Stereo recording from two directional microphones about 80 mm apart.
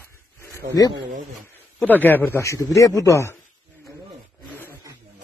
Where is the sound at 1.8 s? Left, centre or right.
Left.